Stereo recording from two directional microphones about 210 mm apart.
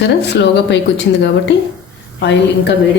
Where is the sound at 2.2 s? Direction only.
55° left (ahead or behind).